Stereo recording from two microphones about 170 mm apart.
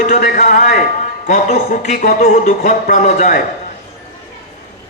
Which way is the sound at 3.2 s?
55° left (ahead or behind).